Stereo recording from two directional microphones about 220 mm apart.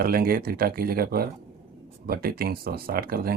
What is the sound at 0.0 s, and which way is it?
Speech, 40° right (ahead or behind).